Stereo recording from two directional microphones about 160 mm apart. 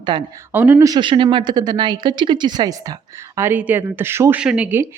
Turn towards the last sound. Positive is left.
turn(degrees=-10)  # may be behind; listen again after turning